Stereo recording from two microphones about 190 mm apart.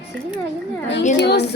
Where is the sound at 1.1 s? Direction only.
60° left (ahead or behind).